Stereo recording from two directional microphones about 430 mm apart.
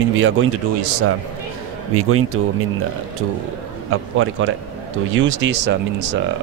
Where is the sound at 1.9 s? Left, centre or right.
Right.